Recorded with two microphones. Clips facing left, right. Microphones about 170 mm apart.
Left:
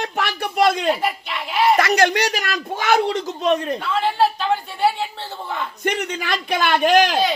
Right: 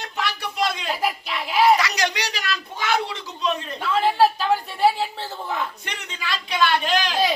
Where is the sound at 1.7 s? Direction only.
50° left (ahead or behind).